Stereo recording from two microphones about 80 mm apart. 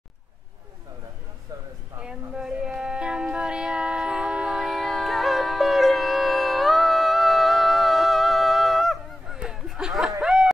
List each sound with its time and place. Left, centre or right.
1.5 s a sound: right
2.0 s music: centre
9.4 s honk: centre
10.2 s snicker: centre